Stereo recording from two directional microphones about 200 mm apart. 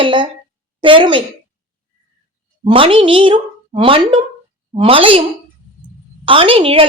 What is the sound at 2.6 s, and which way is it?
A woman's voice, 25° right (ahead or behind).